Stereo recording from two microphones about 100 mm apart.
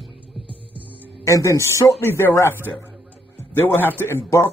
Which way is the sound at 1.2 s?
30° left (ahead or behind).